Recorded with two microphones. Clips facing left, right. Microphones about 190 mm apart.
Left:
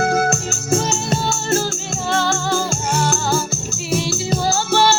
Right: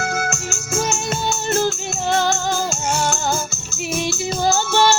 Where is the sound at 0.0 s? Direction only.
35° left (ahead or behind).